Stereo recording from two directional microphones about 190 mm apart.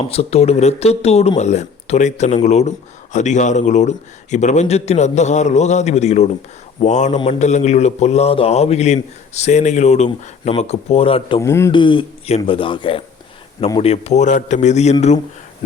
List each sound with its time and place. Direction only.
0.0 s speech: 30° left (ahead or behind)
11.3 s speech: 15° left (ahead or behind)
11.7 s speech: 25° left (ahead or behind)